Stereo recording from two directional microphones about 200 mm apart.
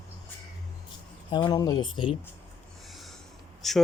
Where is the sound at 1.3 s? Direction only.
25° left (ahead or behind).